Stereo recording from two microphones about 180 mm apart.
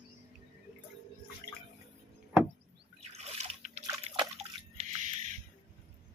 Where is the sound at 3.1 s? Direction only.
35° right (ahead or behind).